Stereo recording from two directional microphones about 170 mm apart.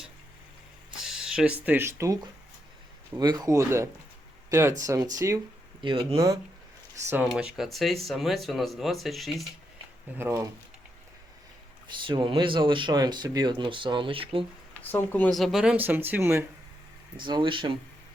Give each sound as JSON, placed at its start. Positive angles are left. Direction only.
{"t": 1.0, "sound": "speech", "side_deg": -5}
{"t": 3.2, "sound": "speech", "side_deg": -20}
{"t": 5.8, "sound": "speech", "side_deg": -30}
{"t": 6.1, "sound": "speech", "side_deg": -20}
{"t": 7.1, "sound": "speech", "side_deg": -5}
{"t": 10.2, "sound": "speech", "side_deg": -15}
{"t": 11.9, "sound": "speech", "side_deg": -30}
{"t": 14.8, "sound": "speech", "side_deg": 10}
{"t": 17.2, "sound": "speech", "side_deg": -30}